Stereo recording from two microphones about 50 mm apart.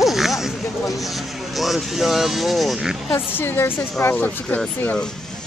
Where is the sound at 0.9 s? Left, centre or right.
Centre.